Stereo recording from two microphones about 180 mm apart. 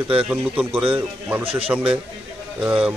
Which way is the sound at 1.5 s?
30° right (ahead or behind).